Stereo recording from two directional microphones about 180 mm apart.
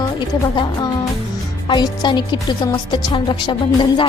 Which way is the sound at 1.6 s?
25° left (ahead or behind).